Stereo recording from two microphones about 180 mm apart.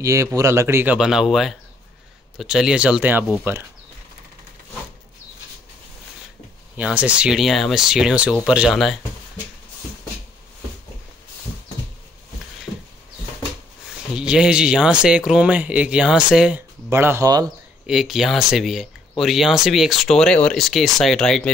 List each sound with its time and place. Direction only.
0.0 s speech: 15° right (ahead or behind)
0.9 s speech: 5° right (ahead or behind)
6.8 s speech: 5° right (ahead or behind)
14.1 s speech: 5° right (ahead or behind)
17.8 s speech: centre (ahead or behind)